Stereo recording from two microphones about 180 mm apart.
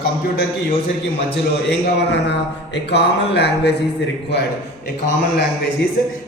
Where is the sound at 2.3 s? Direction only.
70° left (ahead or behind).